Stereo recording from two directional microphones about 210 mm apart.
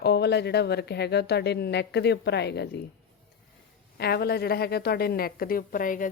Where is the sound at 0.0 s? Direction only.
50° left (ahead or behind).